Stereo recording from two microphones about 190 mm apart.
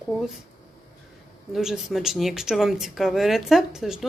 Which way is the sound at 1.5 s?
Centre (ahead or behind).